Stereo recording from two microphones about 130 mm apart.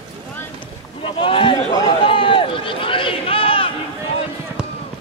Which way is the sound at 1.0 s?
40° left (ahead or behind).